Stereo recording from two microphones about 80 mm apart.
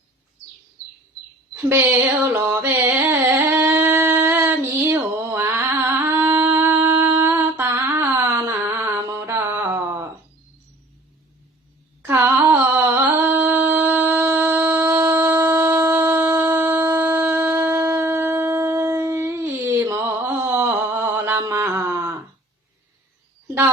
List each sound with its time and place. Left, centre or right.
1.7 s a sound: right
3.1 s singing: right
4.9 s mantra: right
6.1 s shofar: right
7.2 s humming: right
7.8 s a sound: right
8.9 s mantra: right
9.1 s mantra: right
12.0 s music: right
13.0 s a sound: right
19.8 s mantra: right
20.7 s mantra: right
21.4 s a sound: right